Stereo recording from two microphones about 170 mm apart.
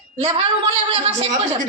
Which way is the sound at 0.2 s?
35° right (ahead or behind).